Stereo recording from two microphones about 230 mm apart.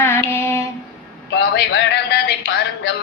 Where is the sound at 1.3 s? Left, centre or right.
Left.